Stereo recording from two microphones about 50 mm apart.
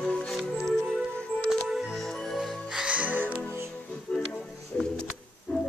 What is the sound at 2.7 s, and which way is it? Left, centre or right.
Music, right.